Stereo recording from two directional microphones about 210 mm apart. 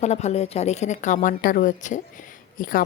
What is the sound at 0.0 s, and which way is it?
A woman's voice, 30° left (ahead or behind).